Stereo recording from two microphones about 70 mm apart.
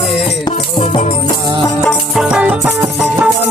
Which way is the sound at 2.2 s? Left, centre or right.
Centre.